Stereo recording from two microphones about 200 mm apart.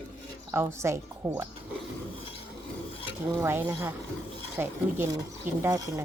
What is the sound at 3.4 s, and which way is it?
A woman's voice, 10° right (ahead or behind).